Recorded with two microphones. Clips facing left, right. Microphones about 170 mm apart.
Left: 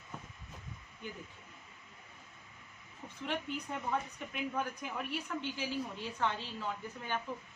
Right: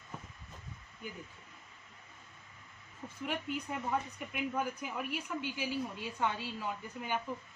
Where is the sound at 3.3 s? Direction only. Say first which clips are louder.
Even; 5° right (ahead or behind).